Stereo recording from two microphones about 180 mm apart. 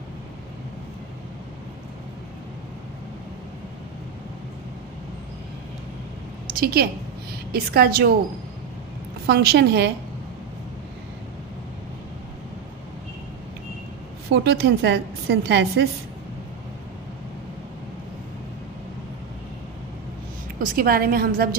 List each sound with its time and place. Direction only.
6.6 s a woman's voice: 60° right (ahead or behind)
9.2 s a woman's voice: 60° right (ahead or behind)
14.3 s a woman's voice: 65° right (ahead or behind)
20.6 s a woman's voice: 55° right (ahead or behind)